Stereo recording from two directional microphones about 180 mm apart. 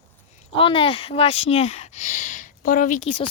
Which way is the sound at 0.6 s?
30° left (ahead or behind).